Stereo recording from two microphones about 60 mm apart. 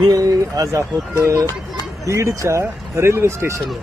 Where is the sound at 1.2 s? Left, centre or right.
Right.